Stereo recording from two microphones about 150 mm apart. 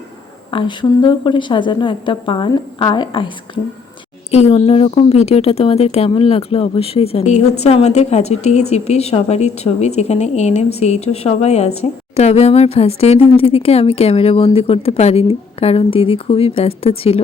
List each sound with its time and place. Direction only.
0.5 s speech: 30° left (ahead or behind)
4.3 s speech: 45° left (ahead or behind)